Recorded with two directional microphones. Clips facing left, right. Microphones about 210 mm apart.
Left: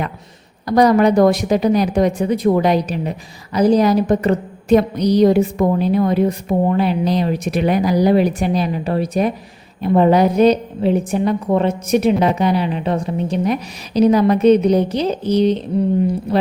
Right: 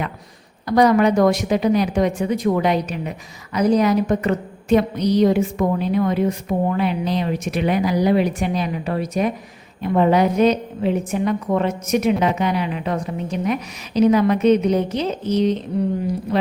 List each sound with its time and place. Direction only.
0.8 s speech: 35° left (ahead or behind)